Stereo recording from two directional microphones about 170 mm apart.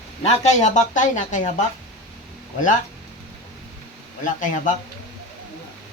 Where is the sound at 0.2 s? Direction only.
40° left (ahead or behind).